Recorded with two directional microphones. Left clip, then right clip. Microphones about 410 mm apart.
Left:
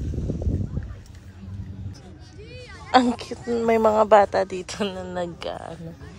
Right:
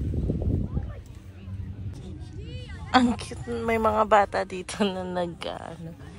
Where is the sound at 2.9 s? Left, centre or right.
Centre.